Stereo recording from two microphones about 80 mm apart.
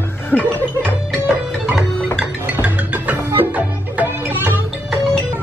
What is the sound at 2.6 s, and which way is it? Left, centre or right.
Music, centre.